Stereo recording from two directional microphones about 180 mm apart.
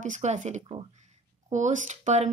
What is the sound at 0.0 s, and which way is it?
Speech, 40° right (ahead or behind).